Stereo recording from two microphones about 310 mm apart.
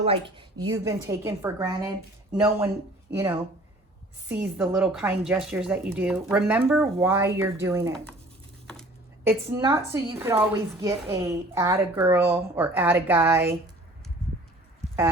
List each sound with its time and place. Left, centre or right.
0.0 s a woman's voice: centre
4.3 s speech: centre
8.6 s a sound: centre
9.6 s a woman's voice: centre